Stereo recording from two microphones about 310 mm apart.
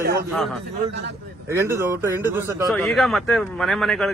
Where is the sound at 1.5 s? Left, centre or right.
Centre.